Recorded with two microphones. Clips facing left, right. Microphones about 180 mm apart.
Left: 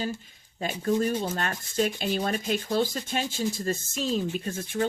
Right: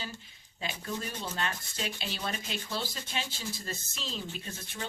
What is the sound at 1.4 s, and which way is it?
Speech, 50° left (ahead or behind).